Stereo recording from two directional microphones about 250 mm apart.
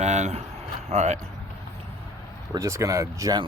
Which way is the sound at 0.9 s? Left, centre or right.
Right.